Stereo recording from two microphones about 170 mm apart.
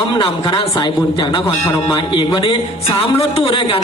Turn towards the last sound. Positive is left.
turn(degrees=30)  # may be behind; listen again after turning